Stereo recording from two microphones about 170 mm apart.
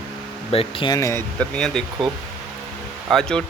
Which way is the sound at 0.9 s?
15° left (ahead or behind).